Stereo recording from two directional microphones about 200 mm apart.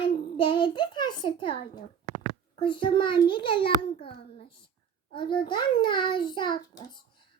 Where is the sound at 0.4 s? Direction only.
25° left (ahead or behind).